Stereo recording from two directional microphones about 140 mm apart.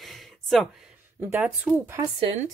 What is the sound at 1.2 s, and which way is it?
Speech, 15° right (ahead or behind).